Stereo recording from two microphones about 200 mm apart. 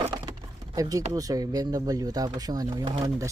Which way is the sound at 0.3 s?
20° right (ahead or behind).